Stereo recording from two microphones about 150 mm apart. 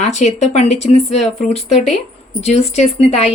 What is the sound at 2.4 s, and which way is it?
Speech, 45° left (ahead or behind).